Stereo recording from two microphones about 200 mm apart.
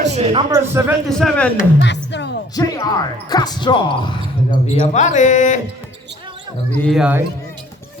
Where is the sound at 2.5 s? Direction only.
15° left (ahead or behind); by 5.6 s 40° left (ahead or behind).